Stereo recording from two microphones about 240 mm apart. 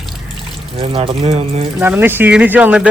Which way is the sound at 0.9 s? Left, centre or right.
Right.